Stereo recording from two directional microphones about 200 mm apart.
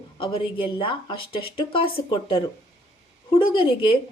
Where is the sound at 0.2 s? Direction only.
25° left (ahead or behind).